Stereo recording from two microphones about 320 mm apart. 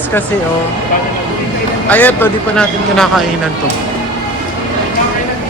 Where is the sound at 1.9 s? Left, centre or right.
Centre.